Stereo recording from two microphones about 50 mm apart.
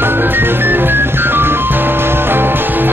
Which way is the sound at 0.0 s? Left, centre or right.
Right.